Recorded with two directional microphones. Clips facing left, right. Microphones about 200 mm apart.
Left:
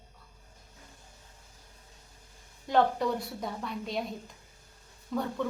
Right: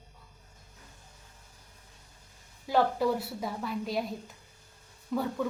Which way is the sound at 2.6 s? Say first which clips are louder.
Even; 5° right (ahead or behind).